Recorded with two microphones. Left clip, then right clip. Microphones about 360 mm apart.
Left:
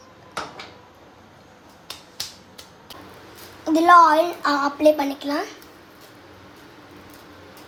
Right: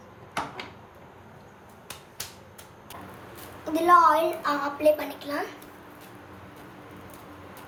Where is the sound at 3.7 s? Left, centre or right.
Centre.